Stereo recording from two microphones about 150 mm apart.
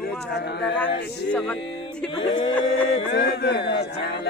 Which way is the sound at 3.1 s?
90° left.